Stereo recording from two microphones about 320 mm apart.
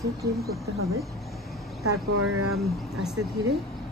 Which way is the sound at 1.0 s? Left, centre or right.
Centre.